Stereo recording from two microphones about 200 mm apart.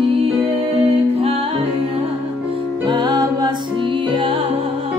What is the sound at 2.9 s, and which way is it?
Music, 20° right (ahead or behind).